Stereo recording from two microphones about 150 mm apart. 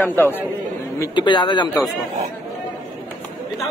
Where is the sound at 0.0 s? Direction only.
15° left (ahead or behind).